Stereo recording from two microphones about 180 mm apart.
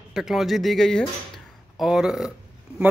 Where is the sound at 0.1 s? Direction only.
Centre (ahead or behind).